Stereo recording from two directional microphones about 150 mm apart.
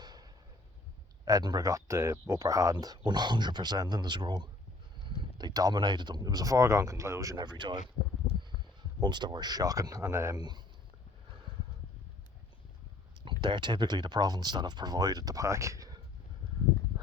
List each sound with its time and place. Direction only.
0.0 s a sound: 25° right (ahead or behind)
1.2 s speech: 25° right (ahead or behind)
9.0 s speech: 30° right (ahead or behind)
13.4 s speech: 30° right (ahead or behind)